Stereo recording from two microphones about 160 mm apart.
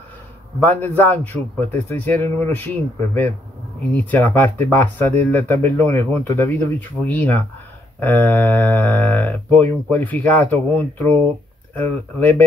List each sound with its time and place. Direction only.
0.7 s speech: 10° left (ahead or behind)